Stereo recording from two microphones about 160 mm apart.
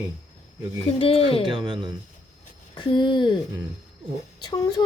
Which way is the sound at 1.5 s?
30° right (ahead or behind).